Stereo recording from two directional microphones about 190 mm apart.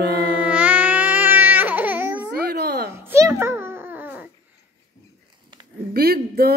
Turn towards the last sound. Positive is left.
turn(degrees=-55)  # may be behind; listen again after turning